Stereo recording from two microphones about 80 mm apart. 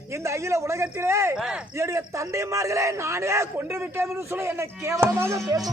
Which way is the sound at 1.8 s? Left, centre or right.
Right.